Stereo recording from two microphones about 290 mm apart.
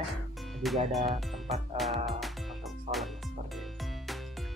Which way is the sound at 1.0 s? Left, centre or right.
Right.